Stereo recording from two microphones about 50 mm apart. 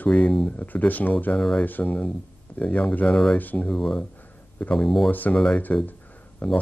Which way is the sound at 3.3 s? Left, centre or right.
Left.